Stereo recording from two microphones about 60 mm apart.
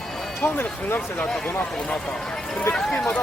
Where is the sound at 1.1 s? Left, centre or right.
Left.